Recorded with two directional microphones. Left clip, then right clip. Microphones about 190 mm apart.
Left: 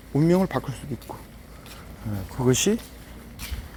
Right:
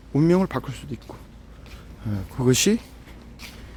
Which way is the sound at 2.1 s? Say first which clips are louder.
Right 2 dB; 45° right (ahead or behind).